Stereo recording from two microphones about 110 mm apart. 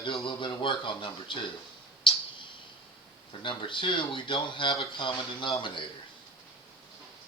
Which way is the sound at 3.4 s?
50° left (ahead or behind).